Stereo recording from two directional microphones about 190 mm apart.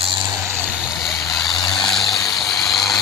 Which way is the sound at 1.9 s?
Centre (ahead or behind).